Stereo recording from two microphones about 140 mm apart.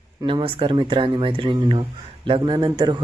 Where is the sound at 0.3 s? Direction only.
40° right (ahead or behind).